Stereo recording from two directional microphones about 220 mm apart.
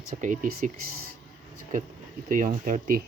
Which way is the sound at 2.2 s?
35° right (ahead or behind).